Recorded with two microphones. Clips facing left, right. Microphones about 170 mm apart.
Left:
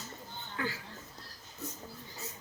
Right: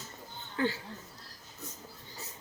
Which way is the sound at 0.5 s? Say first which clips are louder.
Right 6 dB; 30° right (ahead or behind).